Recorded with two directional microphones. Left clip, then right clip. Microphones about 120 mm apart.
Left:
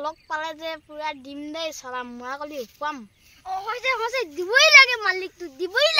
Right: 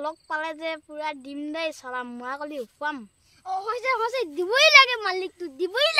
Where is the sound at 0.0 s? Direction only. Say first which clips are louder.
Left 1 dB; 40° right (ahead or behind).